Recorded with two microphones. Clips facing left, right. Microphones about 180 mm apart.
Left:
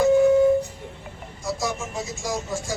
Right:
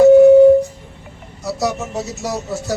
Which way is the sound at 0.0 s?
70° right (ahead or behind).